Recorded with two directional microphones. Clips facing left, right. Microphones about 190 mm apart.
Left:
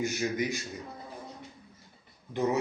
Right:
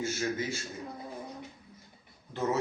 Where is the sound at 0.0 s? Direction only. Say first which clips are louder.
Left 2 dB; 15° left (ahead or behind).